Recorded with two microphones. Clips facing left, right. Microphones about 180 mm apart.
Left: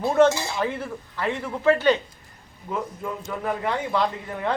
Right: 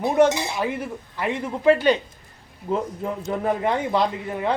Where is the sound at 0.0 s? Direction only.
15° right (ahead or behind).